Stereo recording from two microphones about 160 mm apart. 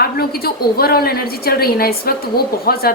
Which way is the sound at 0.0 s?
70° left (ahead or behind).